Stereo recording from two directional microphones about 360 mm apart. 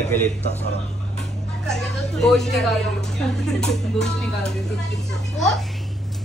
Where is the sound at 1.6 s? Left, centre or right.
Centre.